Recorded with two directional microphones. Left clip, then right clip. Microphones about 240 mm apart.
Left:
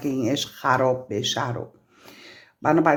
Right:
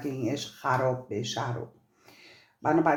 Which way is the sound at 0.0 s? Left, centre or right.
Left.